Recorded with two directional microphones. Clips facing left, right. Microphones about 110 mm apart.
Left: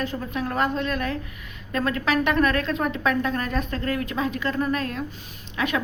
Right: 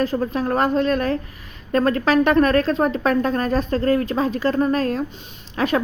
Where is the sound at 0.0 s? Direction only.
40° right (ahead or behind).